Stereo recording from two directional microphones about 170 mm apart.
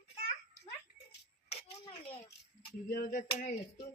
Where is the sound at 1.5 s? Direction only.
35° left (ahead or behind).